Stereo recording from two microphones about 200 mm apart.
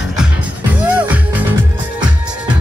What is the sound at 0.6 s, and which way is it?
Music, 10° right (ahead or behind).